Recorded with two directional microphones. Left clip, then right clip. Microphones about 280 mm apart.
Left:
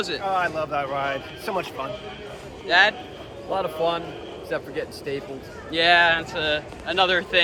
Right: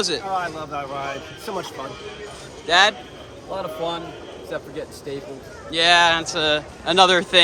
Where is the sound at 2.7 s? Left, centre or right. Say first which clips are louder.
Right 2 dB; centre.